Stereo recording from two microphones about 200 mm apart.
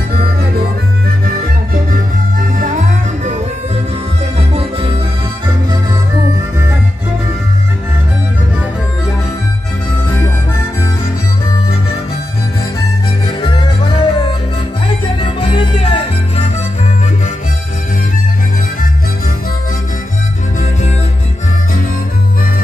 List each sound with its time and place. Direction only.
4.4 s music: 30° right (ahead or behind)
13.4 s music: 20° left (ahead or behind)
15.1 s music: 25° left (ahead or behind)